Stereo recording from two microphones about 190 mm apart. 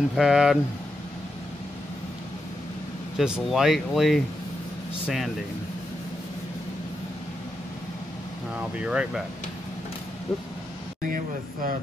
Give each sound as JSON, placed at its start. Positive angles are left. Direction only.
{"t": 0.1, "sound": "speech", "side_deg": -5}
{"t": 3.2, "sound": "speech", "side_deg": -5}
{"t": 8.7, "sound": "speech", "side_deg": -5}
{"t": 11.1, "sound": "a sound", "side_deg": -45}